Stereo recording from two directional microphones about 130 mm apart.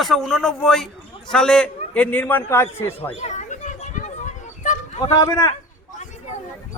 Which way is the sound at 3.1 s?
60° left (ahead or behind).